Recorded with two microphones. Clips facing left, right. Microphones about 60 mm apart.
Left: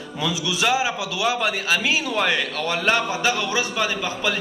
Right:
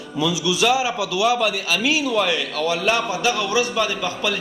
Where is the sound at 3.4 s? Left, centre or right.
Left.